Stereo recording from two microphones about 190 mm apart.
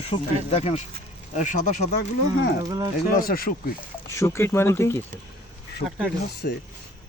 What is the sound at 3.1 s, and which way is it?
Speech, 50° left (ahead or behind).